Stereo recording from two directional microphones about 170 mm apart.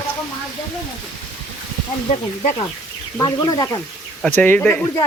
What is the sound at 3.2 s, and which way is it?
Speech, 20° left (ahead or behind).